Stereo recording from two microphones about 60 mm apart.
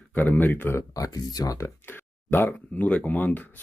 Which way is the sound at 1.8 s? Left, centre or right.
Left.